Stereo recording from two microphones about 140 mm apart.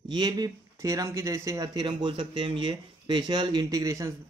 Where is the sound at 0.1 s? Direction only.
30° right (ahead or behind).